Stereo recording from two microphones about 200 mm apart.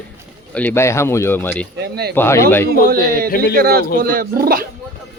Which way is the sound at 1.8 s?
55° right (ahead or behind).